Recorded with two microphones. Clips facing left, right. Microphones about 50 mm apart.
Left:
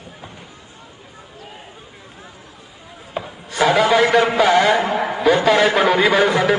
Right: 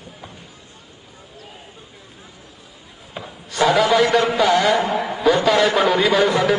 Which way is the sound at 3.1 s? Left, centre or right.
Centre.